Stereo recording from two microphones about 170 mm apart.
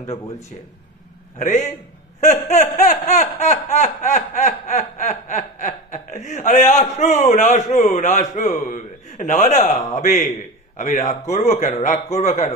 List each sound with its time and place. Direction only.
1.4 s a man's voice: 45° left (ahead or behind)
2.1 s laughter: 45° left (ahead or behind)
11.3 s a man's voice: 45° left (ahead or behind)